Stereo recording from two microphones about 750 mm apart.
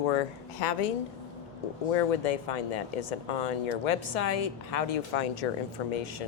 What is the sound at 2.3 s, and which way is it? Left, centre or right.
Speech, left.